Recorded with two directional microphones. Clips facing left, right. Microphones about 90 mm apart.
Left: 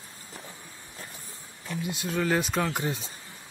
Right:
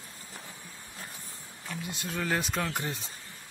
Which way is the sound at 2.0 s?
Centre (ahead or behind).